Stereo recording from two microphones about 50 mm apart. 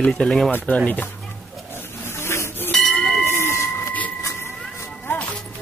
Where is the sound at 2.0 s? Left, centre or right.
Left.